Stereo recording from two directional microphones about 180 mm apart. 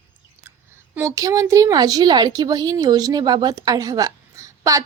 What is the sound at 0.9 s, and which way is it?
A woman's voice, 20° right (ahead or behind).